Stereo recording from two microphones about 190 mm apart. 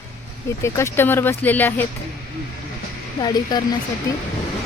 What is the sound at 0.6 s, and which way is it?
Speech, 15° left (ahead or behind).